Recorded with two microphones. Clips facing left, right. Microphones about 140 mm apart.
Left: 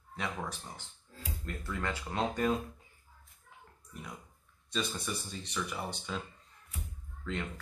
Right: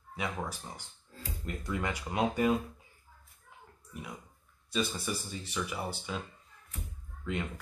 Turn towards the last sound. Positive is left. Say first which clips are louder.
# right 2 dB
turn(degrees=-10)  # may be behind; listen again after turning